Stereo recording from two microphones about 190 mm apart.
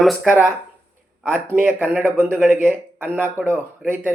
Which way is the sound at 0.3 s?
10° right (ahead or behind).